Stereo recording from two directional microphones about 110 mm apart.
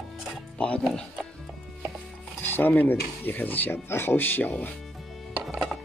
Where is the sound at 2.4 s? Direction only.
15° left (ahead or behind).